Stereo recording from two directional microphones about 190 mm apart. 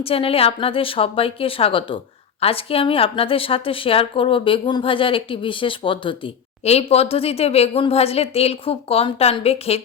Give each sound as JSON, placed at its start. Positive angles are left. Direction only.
{"t": 0.0, "sound": "a woman's voice", "side_deg": 30}